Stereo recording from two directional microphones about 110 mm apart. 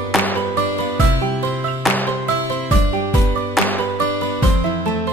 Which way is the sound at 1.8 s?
Centre (ahead or behind).